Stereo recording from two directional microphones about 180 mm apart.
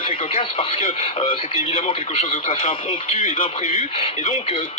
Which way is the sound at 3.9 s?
30° left (ahead or behind).